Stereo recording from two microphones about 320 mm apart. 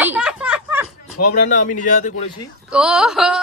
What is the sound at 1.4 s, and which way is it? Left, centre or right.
Speech, left.